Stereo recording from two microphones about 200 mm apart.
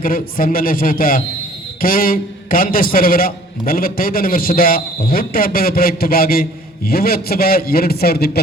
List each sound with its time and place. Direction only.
0.0 s a man's voice: 45° left (ahead or behind)